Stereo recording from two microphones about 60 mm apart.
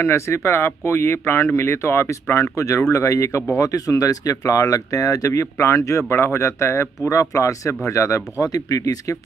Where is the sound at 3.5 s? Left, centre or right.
Left.